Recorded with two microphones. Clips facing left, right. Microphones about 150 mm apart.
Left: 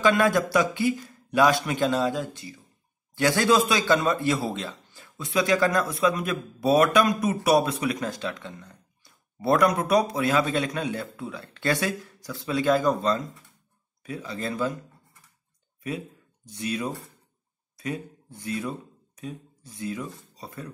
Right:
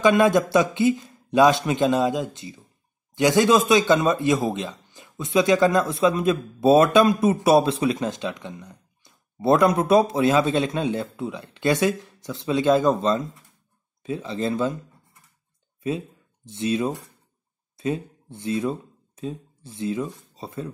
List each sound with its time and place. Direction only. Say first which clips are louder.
0.0 s speech: right 4 dB; 20° right (ahead or behind)
16.4 s speech: right 6 dB; 25° right (ahead or behind)